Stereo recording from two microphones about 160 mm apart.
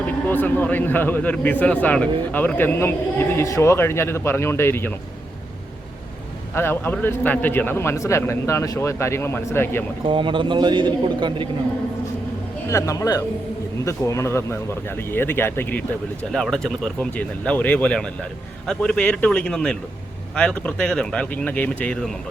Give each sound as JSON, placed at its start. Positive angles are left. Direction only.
{"t": 0.3, "sound": "a man's voice", "side_deg": 10}
{"t": 6.5, "sound": "a man's voice", "side_deg": 15}
{"t": 10.1, "sound": "a man's voice", "side_deg": -30}
{"t": 12.6, "sound": "a man's voice", "side_deg": 20}